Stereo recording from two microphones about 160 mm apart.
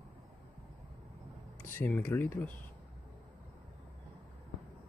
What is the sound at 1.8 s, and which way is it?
Speech, 10° left (ahead or behind).